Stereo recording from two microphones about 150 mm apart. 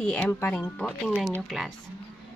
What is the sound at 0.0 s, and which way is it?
A woman's voice, 10° left (ahead or behind).